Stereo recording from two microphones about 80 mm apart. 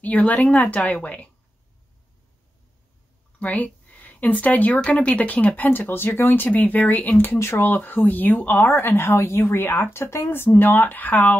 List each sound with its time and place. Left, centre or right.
0.0 s a woman's voice: centre
3.3 s speech: centre